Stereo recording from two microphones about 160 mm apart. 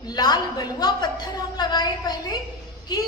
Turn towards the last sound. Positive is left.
turn(degrees=25)  # may be behind; listen again after turning